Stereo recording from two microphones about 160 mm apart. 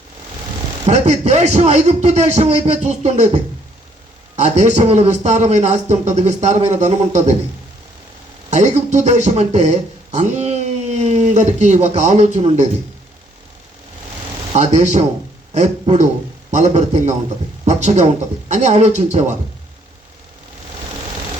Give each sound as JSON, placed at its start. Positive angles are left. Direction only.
{"t": 0.9, "sound": "a man's voice", "side_deg": -45}
{"t": 8.4, "sound": "a man's voice", "side_deg": -45}
{"t": 14.5, "sound": "a man's voice", "side_deg": -45}